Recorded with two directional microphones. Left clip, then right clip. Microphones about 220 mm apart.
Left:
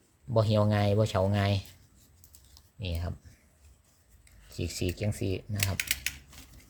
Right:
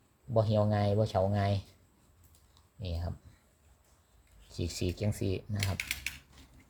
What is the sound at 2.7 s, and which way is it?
Speech, 15° left (ahead or behind).